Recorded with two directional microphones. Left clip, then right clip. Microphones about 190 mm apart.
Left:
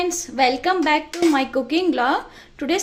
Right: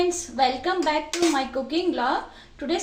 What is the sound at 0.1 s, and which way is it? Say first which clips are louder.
A woman's voice: left 4 dB; 55° left (ahead or behind).